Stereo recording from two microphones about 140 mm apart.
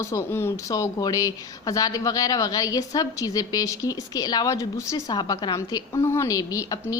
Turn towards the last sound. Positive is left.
turn(degrees=25)  # may be behind; listen again after turning